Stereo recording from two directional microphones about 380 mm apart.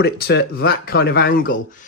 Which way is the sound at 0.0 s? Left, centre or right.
Left.